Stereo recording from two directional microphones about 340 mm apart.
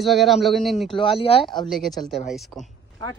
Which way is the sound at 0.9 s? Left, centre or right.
Centre.